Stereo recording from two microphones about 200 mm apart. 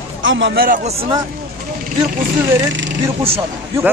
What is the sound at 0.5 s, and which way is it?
Speech, 45° right (ahead or behind).